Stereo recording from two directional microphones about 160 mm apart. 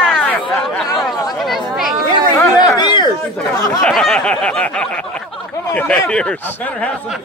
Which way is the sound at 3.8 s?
Centre (ahead or behind).